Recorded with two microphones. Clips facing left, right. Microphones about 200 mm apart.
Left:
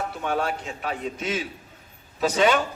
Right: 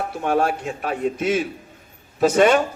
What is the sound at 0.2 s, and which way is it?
Speech, 50° right (ahead or behind).